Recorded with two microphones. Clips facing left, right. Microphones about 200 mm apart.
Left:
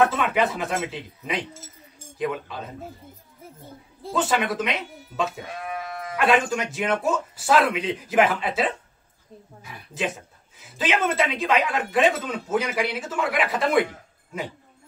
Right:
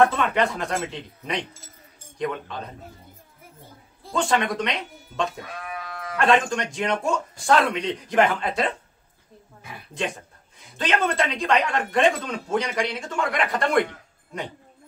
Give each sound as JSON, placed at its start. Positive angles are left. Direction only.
{"t": 0.0, "sound": "a man's voice", "side_deg": 5}
{"t": 4.1, "sound": "a man's voice", "side_deg": 5}
{"t": 5.4, "sound": "sheep", "side_deg": 25}
{"t": 6.1, "sound": "a man's voice", "side_deg": 5}
{"t": 9.9, "sound": "a man's voice", "side_deg": 5}